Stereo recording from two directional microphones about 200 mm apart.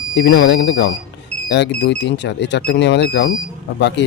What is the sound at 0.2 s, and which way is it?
Speech, 60° left (ahead or behind).